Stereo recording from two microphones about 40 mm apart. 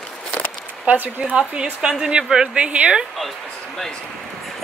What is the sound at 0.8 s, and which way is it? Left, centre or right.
Speech, right.